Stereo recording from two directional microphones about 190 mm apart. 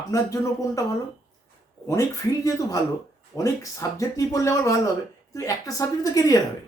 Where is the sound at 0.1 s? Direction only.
15° left (ahead or behind).